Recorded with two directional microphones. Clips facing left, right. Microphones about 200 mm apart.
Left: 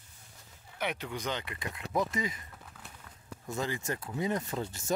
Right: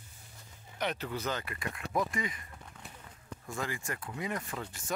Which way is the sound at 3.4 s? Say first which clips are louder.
Left 4 dB; 25° left (ahead or behind).